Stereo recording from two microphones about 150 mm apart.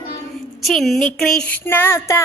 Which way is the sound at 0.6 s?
Centre (ahead or behind).